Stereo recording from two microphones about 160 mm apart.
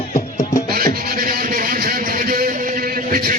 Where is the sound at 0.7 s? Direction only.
65° right (ahead or behind).